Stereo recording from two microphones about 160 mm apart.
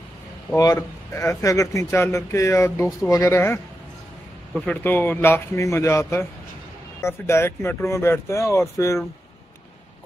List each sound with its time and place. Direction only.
0.6 s speech: 20° left (ahead or behind)